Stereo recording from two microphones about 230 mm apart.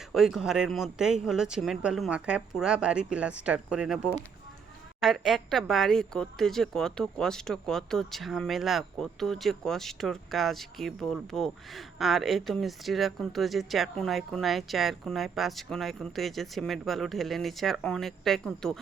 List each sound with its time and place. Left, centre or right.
0.1 s speech: centre